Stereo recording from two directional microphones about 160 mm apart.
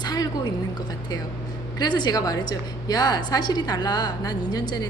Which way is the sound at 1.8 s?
25° left (ahead or behind).